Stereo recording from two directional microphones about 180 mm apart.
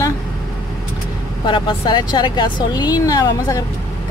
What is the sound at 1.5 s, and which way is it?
Speech, 25° left (ahead or behind).